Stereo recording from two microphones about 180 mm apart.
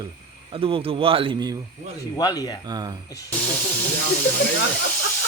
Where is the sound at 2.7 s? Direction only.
25° right (ahead or behind).